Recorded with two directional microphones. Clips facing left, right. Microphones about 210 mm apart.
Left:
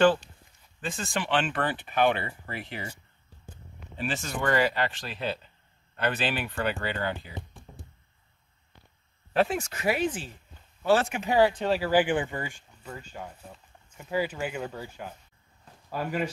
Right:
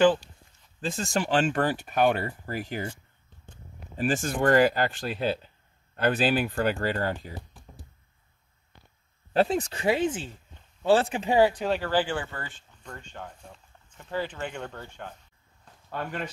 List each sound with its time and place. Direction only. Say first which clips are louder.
0.7 s speech: right 4 dB; 40° right (ahead or behind)
3.9 s speech: right 5 dB; 50° right (ahead or behind)
7.3 s music: left 1 dB; centre (ahead or behind)
9.3 s speech: right 2 dB; 35° right (ahead or behind)
11.3 s speech: right 1 dB; 15° right (ahead or behind)
11.6 s speech: left 1 dB; centre (ahead or behind)
11.9 s speech: left 3 dB; 15° left (ahead or behind)
15.6 s a sound: left 2 dB; 5° left (ahead or behind)